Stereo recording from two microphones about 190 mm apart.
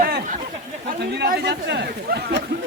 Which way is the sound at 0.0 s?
45° right (ahead or behind).